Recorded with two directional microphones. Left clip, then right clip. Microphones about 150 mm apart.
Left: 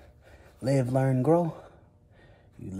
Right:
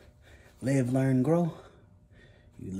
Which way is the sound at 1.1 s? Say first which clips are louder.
Left 5 dB; centre (ahead or behind).